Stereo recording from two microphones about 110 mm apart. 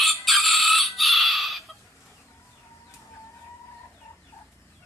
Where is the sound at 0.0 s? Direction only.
Centre (ahead or behind).